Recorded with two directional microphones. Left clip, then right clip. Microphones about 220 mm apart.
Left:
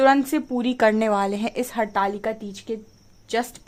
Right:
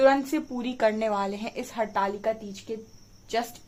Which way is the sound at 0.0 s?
45° left (ahead or behind).